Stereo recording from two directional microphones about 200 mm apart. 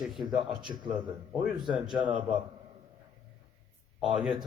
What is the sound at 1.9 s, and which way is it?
Speech, 25° right (ahead or behind).